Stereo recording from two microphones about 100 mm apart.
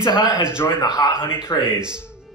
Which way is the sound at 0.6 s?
25° left (ahead or behind).